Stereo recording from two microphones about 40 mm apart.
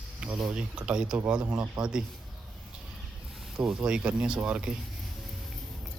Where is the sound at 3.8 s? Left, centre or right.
Right.